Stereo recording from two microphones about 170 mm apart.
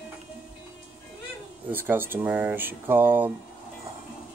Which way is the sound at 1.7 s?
10° right (ahead or behind).